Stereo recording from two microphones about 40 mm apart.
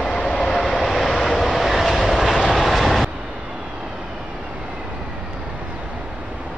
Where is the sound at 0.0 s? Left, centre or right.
Centre.